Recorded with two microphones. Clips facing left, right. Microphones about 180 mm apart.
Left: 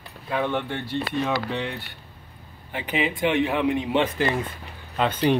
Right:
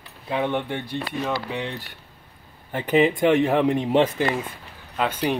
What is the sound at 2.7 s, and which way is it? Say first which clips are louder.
A man's voice: right 7 dB; 45° right (ahead or behind).